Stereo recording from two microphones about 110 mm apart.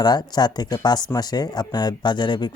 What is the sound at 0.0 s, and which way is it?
Speech, 40° left (ahead or behind).